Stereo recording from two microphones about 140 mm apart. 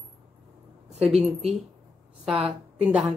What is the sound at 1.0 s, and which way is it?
Speech, centre (ahead or behind).